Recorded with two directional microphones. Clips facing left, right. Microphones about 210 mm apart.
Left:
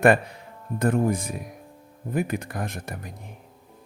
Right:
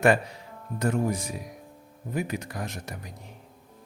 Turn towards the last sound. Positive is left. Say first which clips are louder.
# left 3 dB
turn(degrees=55)  # may be behind; listen again after turning